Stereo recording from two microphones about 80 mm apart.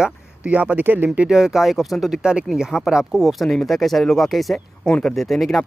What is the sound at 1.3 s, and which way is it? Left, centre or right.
Speech, centre.